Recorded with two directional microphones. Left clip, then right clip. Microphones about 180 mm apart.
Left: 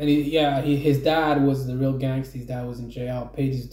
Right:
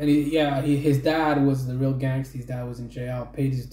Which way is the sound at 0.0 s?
Centre (ahead or behind).